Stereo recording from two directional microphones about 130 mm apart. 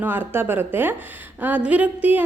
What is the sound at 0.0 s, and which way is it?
A woman's voice, 15° right (ahead or behind).